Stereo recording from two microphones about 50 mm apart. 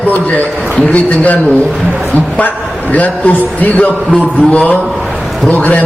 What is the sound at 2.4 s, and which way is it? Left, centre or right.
A man's voice, left.